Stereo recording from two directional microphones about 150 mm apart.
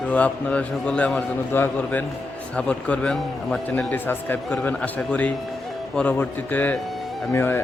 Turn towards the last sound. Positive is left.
turn(degrees=15)  # may be behind; listen again after turning